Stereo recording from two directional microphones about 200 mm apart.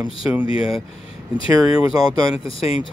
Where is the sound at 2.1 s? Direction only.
25° left (ahead or behind).